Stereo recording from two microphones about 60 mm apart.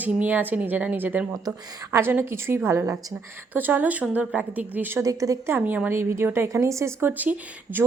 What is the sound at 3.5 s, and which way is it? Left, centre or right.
Speech, right.